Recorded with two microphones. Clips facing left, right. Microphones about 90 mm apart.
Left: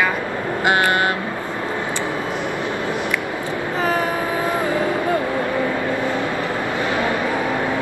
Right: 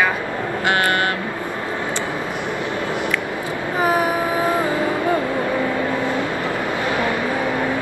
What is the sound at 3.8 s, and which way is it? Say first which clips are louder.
Vehicle: right 3 dB; 15° right (ahead or behind).